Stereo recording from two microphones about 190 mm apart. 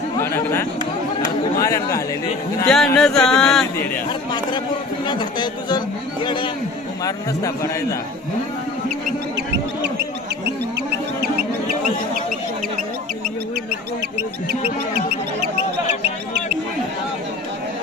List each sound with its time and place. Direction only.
0.2 s chatter: 15° left (ahead or behind)
1.6 s a man's voice: 15° left (ahead or behind)
2.6 s speech: 5° left (ahead or behind)
5.0 s a man's voice: 25° left (ahead or behind)
10.4 s bird: 60° right (ahead or behind)
14.9 s music: 30° left (ahead or behind)